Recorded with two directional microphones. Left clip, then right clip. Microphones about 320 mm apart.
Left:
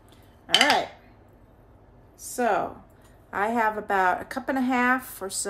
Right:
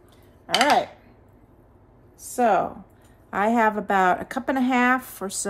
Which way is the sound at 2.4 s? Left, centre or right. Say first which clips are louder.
Right 4 dB; centre.